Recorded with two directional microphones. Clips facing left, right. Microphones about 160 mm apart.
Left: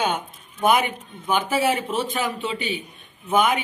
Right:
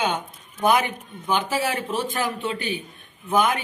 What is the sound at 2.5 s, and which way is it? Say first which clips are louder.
Speech: left 1 dB; 20° left (ahead or behind).